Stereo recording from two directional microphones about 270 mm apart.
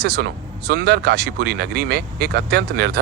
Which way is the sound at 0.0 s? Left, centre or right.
Right.